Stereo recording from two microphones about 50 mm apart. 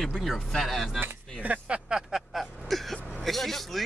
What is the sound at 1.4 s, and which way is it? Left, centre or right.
Speech, right.